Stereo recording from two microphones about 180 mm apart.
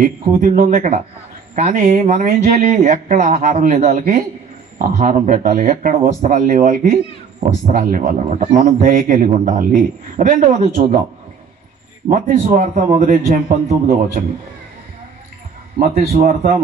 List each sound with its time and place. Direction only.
0.0 s speech: 50° right (ahead or behind)
12.1 s speech: 45° right (ahead or behind)
15.8 s speech: 50° right (ahead or behind)